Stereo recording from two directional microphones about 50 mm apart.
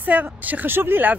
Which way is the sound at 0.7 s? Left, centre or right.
Right.